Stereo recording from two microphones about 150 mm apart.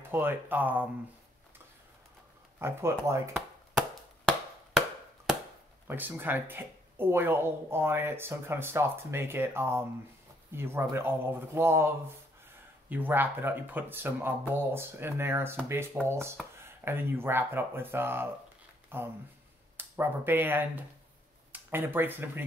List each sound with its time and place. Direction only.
0.1 s speech: 15° right (ahead or behind)
2.6 s speech: 15° right (ahead or behind)
4.3 s chop: centre (ahead or behind)
5.9 s speech: 15° right (ahead or behind)